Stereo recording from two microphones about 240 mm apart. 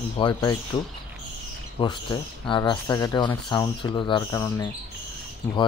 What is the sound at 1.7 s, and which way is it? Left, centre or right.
Speech, centre.